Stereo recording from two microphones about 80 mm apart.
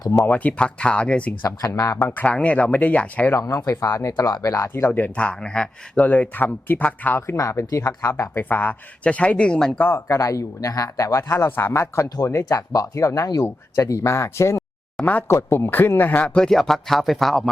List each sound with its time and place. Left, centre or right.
0.3 s speech: centre
1.5 s speech: left
2.0 s speech: left
3.3 s speech: left
4.7 s speech: left; by 6.0 s centre
6.0 s speech: centre
7.3 s speech: left
8.2 s speech: left; by 9.7 s centre
9.7 s speech: left
11.3 s speech: left
12.0 s speech: left
12.3 s speech: left
16.2 s speech: centre